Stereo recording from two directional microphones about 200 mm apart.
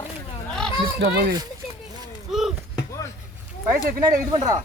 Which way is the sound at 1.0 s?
55° right (ahead or behind).